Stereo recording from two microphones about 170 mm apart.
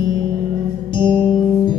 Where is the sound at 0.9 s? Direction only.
25° left (ahead or behind).